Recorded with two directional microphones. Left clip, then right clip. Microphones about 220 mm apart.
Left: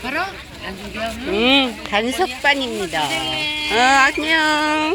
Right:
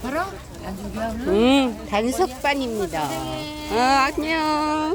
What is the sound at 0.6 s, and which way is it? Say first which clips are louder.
Speech: left 3 dB; 35° right (ahead or behind).